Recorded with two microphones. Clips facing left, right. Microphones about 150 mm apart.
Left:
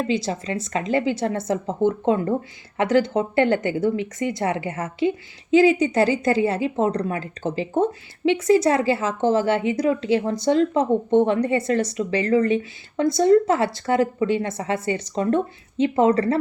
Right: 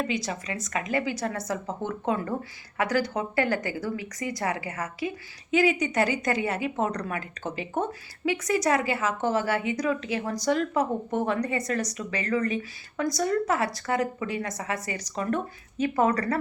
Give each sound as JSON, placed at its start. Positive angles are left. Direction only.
{"t": 0.1, "sound": "speech", "side_deg": 30}